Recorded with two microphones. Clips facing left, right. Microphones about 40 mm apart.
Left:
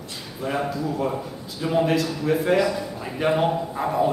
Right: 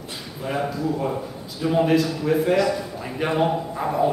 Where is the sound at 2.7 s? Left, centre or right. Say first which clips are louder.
Right 1 dB; centre.